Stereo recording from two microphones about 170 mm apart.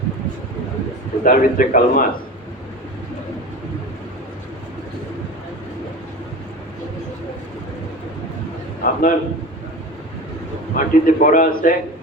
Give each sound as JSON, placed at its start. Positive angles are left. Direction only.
{"t": 1.2, "sound": "a man's voice", "side_deg": 50}
{"t": 8.8, "sound": "a man's voice", "side_deg": 55}
{"t": 10.8, "sound": "a man's voice", "side_deg": 50}